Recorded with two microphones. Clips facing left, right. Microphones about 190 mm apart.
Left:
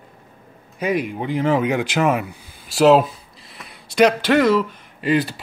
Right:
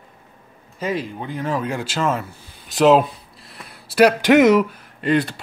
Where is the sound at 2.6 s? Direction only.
Centre (ahead or behind).